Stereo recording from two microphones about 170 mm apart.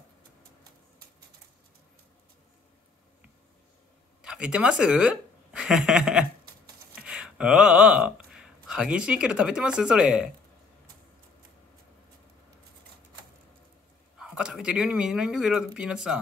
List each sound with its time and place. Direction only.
4.2 s speech: 5° right (ahead or behind)
14.1 s speech: 5° right (ahead or behind)